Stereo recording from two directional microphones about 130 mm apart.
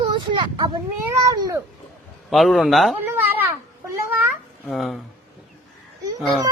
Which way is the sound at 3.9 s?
15° right (ahead or behind).